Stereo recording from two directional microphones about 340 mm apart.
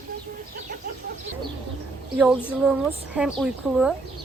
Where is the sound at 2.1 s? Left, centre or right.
Centre.